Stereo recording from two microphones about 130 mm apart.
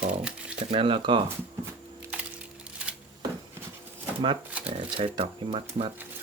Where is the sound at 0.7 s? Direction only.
45° right (ahead or behind).